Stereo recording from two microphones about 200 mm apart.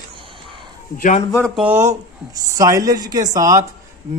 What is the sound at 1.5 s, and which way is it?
Speech, 10° right (ahead or behind).